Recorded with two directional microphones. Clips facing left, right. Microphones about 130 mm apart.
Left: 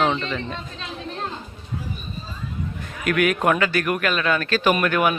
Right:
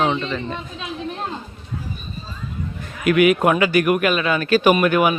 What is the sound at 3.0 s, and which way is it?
A man's voice, 5° right (ahead or behind).